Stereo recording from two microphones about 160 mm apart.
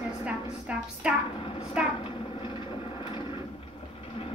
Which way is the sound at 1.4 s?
35° left (ahead or behind).